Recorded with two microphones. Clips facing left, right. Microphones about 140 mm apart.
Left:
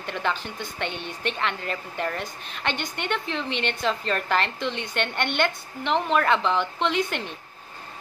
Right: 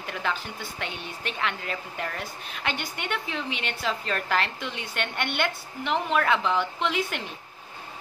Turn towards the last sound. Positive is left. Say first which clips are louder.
# left 3 dB
turn(degrees=-5)  # may be behind; listen again after turning